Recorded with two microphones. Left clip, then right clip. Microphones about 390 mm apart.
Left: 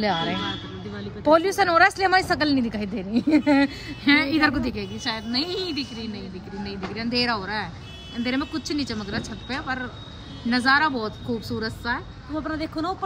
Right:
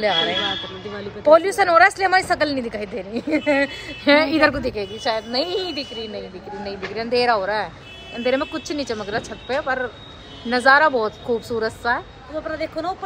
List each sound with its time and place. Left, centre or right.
0.0 s speech: centre
11.1 s speech: right
11.6 s speech: centre
12.4 s speech: centre